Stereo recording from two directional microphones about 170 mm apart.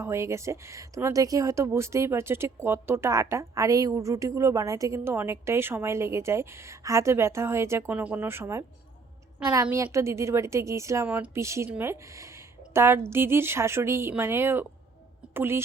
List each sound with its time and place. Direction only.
0.0 s speech: 15° right (ahead or behind)
9.6 s speech: 15° right (ahead or behind)